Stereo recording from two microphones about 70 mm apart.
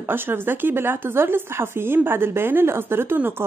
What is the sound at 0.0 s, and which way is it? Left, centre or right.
Speech, right.